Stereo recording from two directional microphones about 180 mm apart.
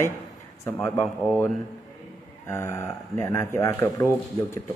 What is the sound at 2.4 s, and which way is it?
Speech, 15° left (ahead or behind).